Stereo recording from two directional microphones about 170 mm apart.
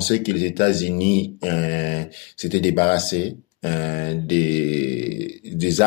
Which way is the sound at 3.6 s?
40° left (ahead or behind).